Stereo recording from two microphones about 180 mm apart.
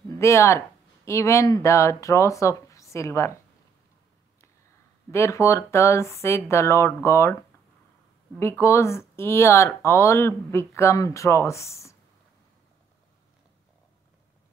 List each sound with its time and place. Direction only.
0.2 s speech: 15° left (ahead or behind)
5.1 s speech: 15° left (ahead or behind)
8.4 s speech: 15° left (ahead or behind)